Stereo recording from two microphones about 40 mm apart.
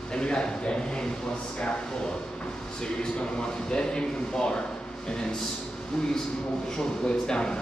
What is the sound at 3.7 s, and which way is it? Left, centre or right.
Speech, left.